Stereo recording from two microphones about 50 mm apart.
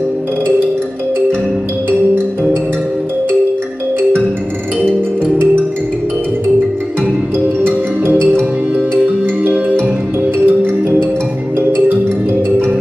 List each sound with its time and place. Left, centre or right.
10.4 s music: right